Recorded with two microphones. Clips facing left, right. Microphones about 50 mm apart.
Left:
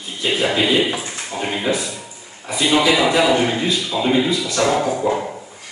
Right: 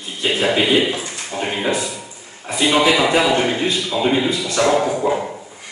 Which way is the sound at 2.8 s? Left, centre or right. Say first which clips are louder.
Even; centre.